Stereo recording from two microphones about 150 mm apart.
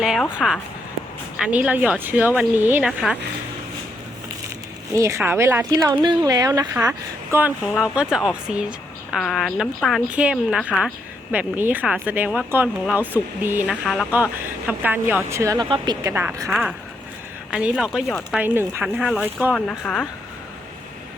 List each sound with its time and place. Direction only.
0.0 s a woman's voice: 5° right (ahead or behind)
4.9 s a woman's voice: 20° right (ahead or behind)
5.9 s a woman's voice: 30° right (ahead or behind)
7.7 s a woman's voice: 5° right (ahead or behind)
13.8 s a woman's voice: centre (ahead or behind)
14.7 s a woman's voice: 10° right (ahead or behind); by 16.1 s 30° right (ahead or behind)
16.5 s a woman's voice: 5° right (ahead or behind)
19.5 s a woman's voice: 5° left (ahead or behind)